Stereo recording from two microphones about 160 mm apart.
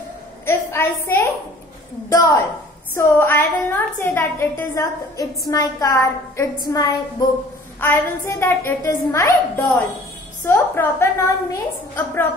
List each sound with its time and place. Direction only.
0.5 s a woman's voice: 15° left (ahead or behind)